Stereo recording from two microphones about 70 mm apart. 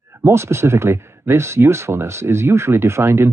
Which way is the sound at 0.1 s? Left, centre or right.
Right.